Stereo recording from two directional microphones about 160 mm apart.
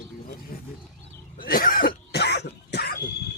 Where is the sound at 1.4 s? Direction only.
65° left (ahead or behind); by 3.0 s 85° left.